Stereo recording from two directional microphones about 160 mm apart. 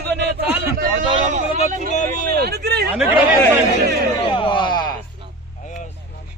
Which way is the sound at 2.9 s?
10° right (ahead or behind).